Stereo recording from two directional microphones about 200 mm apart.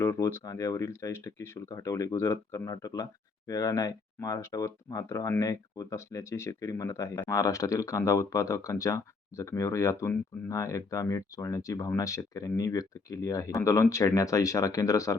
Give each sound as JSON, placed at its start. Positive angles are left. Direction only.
{"t": 0.0, "sound": "speech", "side_deg": 15}